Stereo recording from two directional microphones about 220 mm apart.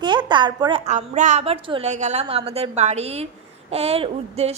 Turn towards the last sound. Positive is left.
turn(degrees=-25)  # may be behind; listen again after turning